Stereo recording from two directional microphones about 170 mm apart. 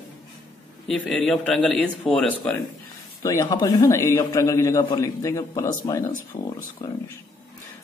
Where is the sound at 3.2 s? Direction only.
20° left (ahead or behind).